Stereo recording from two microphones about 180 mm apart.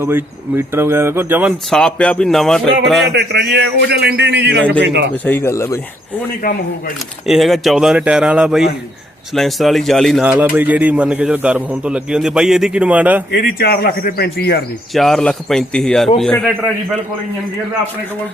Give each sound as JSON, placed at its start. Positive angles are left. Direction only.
{"t": 0.0, "sound": "speech", "side_deg": -15}
{"t": 1.7, "sound": "speech", "side_deg": 5}
{"t": 3.2, "sound": "a man's voice", "side_deg": -65}
{"t": 5.1, "sound": "speech", "side_deg": 10}
{"t": 7.3, "sound": "speech", "side_deg": 0}
{"t": 13.3, "sound": "speech", "side_deg": 55}
{"t": 14.9, "sound": "speech", "side_deg": 0}